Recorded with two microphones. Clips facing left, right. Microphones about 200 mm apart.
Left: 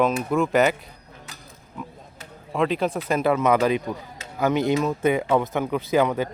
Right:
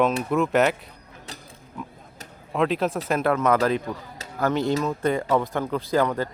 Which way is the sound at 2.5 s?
Centre (ahead or behind).